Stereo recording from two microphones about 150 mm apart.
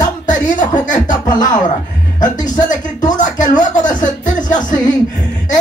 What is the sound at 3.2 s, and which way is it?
Music, 55° left (ahead or behind).